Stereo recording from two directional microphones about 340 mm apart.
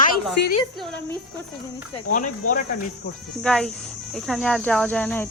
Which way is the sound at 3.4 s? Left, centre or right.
Centre.